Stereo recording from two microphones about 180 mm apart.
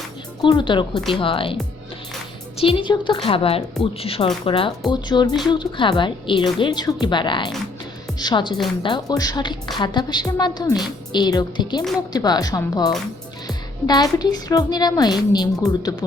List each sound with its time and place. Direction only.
0.4 s a woman's voice: 25° left (ahead or behind)
2.6 s a woman's voice: 30° left (ahead or behind)